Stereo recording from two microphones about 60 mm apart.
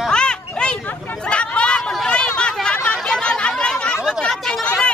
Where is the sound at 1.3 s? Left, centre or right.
Centre.